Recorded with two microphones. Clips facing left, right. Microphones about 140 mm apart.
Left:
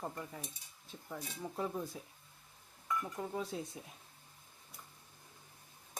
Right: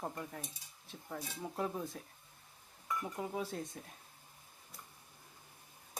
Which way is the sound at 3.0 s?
10° right (ahead or behind).